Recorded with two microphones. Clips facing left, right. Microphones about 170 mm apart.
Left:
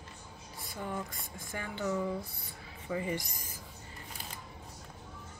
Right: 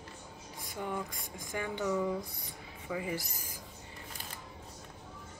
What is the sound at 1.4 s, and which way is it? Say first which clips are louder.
Speech: right 3 dB; 15° right (ahead or behind).